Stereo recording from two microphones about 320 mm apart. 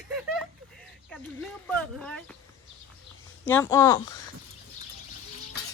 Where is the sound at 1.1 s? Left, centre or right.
Centre.